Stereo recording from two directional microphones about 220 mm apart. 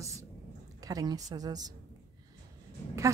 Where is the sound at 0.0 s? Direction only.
15° right (ahead or behind).